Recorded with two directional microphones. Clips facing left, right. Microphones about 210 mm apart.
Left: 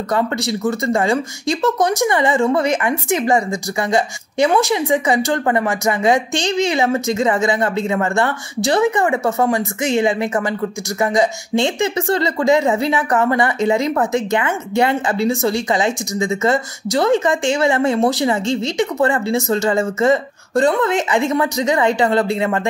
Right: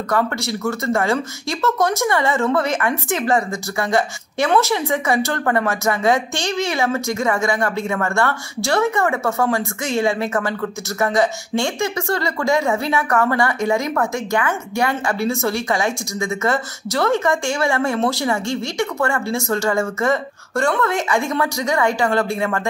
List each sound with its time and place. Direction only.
0.1 s speech: 20° left (ahead or behind)